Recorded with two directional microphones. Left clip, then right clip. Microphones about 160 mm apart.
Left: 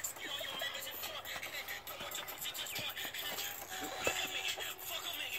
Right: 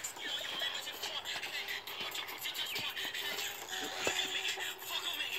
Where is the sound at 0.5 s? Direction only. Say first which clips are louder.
Right 3 dB; 45° left (ahead or behind).